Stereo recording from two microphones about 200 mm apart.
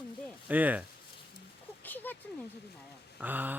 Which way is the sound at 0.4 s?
10° right (ahead or behind).